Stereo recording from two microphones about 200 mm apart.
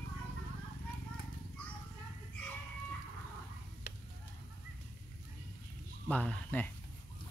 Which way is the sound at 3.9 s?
50° left (ahead or behind).